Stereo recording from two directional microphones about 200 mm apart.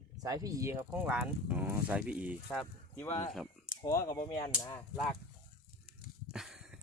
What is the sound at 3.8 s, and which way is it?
Speech, 15° left (ahead or behind).